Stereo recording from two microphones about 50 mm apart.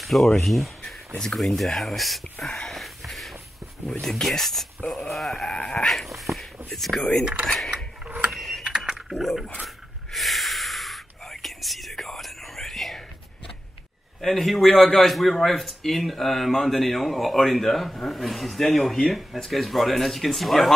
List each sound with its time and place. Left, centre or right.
0.0 s a man's voice: centre
2.4 s speech: centre
2.8 s a sound: centre
4.1 s a man's voice: centre
5.6 s dog: centre
5.9 s speech: centre
8.3 s mechanisms: centre
8.6 s typing: centre
9.1 s a man's voice: centre
10.1 s whispering: centre
14.2 s a man's voice: centre